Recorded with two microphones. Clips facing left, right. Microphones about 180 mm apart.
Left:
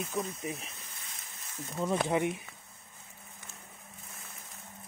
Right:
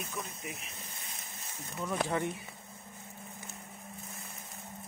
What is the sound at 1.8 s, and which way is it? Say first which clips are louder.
Speech: left 4 dB; 20° left (ahead or behind).